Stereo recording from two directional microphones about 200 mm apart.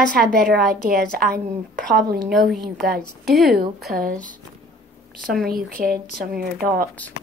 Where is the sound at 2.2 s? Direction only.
Centre (ahead or behind).